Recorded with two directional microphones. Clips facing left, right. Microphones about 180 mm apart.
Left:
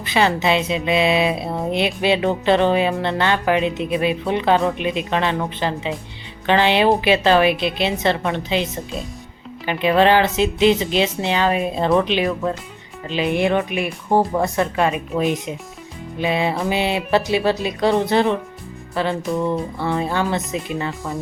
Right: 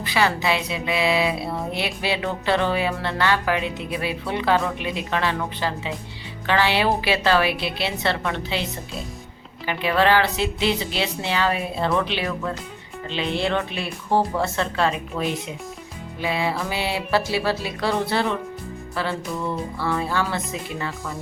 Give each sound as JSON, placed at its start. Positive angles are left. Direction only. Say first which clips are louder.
{"t": 0.0, "sound": "a woman's voice", "louder": "left 4 dB", "side_deg": 20}